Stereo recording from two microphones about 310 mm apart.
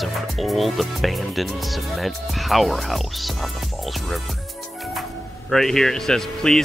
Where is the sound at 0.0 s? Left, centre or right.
Centre.